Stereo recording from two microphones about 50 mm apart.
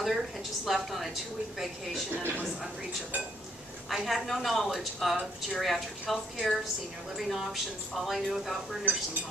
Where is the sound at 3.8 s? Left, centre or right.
Centre.